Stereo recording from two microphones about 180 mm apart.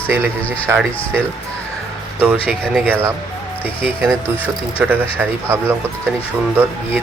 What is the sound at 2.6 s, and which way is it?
Speech, centre (ahead or behind).